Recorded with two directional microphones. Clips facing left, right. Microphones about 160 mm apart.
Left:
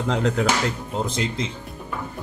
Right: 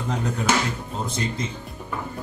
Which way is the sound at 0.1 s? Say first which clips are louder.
Left 2 dB; 90° left.